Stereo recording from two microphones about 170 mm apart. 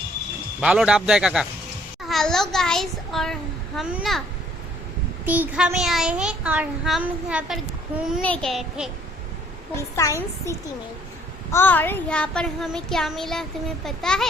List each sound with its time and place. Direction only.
0.6 s child singing: 5° right (ahead or behind)
2.0 s a child's voice: centre (ahead or behind)
3.8 s child singing: 5° right (ahead or behind)
5.2 s child singing: 10° right (ahead or behind)
8.2 s child singing: 5° left (ahead or behind)
9.7 s a woman's voice: 15° left (ahead or behind)
11.5 s child singing: 10° left (ahead or behind)